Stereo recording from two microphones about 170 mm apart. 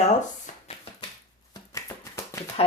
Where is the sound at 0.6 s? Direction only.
35° left (ahead or behind).